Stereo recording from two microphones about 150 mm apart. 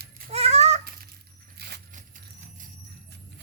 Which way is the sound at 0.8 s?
85° right.